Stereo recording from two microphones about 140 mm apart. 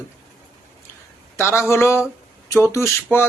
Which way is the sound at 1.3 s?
20° left (ahead or behind).